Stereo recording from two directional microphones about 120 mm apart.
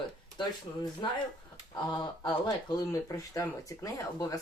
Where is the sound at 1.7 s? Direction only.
35° left (ahead or behind).